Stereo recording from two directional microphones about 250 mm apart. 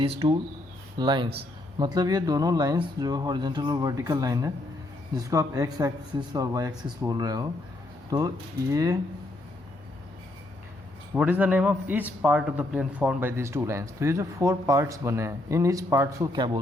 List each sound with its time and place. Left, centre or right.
0.0 s a man's voice: right
11.1 s a man's voice: centre